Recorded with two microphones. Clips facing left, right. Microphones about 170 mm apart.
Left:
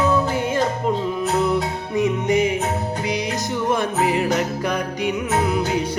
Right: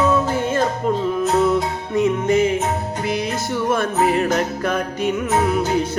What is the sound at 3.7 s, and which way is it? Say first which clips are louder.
Music: right 2 dB; 15° left (ahead or behind).